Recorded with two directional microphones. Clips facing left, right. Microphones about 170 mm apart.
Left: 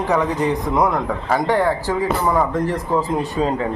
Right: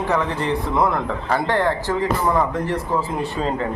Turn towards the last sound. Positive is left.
turn(degrees=10)  # may be behind; listen again after turning